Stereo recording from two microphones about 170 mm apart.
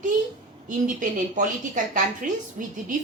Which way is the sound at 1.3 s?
50° right (ahead or behind).